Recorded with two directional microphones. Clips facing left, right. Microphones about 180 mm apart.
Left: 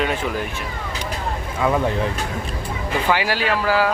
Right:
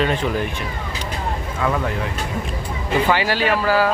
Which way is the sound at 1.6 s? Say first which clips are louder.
Left 3 dB; 15° left (ahead or behind).